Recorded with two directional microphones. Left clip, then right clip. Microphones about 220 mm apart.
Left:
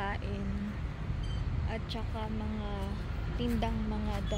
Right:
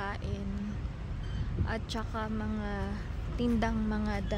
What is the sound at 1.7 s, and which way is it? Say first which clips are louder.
Speech: right 3 dB; 30° right (ahead or behind).